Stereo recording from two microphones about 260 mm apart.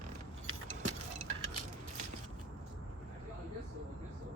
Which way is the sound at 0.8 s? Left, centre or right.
Right.